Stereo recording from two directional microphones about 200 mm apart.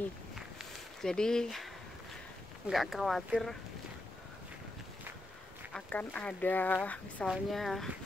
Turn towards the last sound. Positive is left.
turn(degrees=0)  # may be behind; listen again after turning